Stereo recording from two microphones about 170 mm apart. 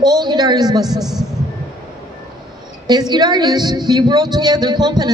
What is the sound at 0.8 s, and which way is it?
Speech, centre (ahead or behind).